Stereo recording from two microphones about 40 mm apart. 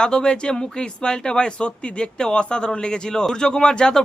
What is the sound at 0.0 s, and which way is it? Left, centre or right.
Speech, centre.